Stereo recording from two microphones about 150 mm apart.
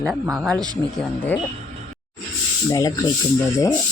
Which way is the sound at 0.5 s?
25° right (ahead or behind).